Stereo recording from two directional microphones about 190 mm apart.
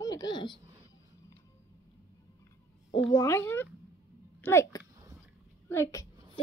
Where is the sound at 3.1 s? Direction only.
15° left (ahead or behind).